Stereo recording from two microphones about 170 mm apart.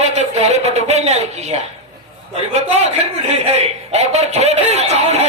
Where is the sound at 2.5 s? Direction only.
40° right (ahead or behind).